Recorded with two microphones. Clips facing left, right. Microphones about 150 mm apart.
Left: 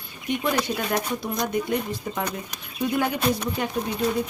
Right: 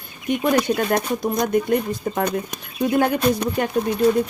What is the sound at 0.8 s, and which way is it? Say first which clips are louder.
Speech: right 5 dB; 50° right (ahead or behind).